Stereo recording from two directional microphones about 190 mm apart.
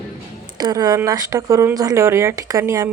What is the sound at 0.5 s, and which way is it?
Speech, 20° right (ahead or behind).